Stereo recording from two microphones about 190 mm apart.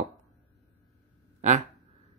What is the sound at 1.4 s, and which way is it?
Speech, 40° right (ahead or behind).